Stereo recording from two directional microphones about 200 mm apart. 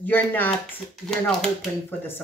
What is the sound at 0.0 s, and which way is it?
Speech, 10° left (ahead or behind).